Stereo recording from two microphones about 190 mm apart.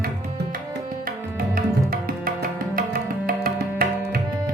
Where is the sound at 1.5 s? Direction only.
50° right (ahead or behind).